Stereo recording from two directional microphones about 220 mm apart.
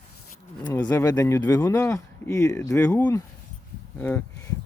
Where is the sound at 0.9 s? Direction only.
10° left (ahead or behind).